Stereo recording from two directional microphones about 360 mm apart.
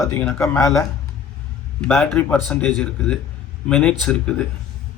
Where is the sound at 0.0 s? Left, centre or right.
Centre.